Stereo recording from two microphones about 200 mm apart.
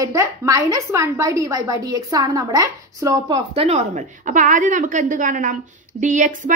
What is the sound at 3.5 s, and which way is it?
A woman's voice, 35° right (ahead or behind).